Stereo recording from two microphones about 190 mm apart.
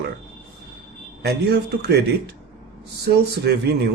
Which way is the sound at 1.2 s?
60° right (ahead or behind).